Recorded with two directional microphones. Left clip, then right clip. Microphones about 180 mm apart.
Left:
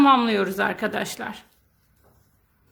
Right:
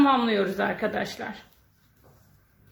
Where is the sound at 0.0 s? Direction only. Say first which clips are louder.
Left 4 dB; 35° left (ahead or behind).